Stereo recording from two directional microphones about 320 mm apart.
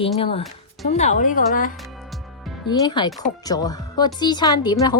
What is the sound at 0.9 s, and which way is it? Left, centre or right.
Speech, left.